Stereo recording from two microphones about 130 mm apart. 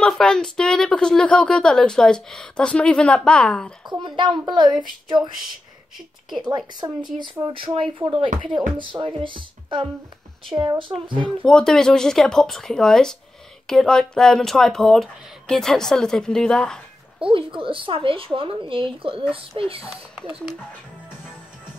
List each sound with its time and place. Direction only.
0.0 s a woman's voice: 5° left (ahead or behind)
4.0 s a child's voice: 35° right (ahead or behind)
6.4 s a child's voice: 35° right (ahead or behind)
7.4 s a child's voice: 45° right (ahead or behind)
11.2 s speech: 5° left (ahead or behind)
17.2 s speech: 40° right (ahead or behind)
19.8 s speech: 5° right (ahead or behind)